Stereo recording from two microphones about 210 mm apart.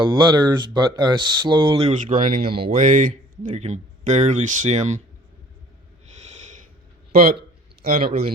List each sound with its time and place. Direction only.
0.0 s speech: 20° right (ahead or behind)
1.9 s speech: 40° right (ahead or behind)
7.1 s a man's voice: 45° right (ahead or behind)